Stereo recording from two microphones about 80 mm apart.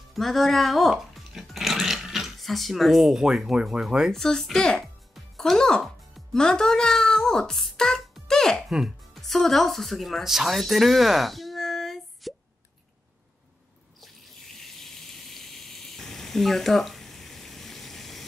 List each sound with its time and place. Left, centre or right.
0.1 s speech: centre
8.6 s speech: centre
14.0 s water: centre